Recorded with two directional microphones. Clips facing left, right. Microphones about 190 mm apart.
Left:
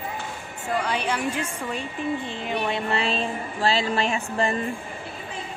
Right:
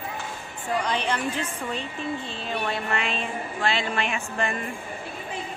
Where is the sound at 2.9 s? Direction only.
35° left (ahead or behind).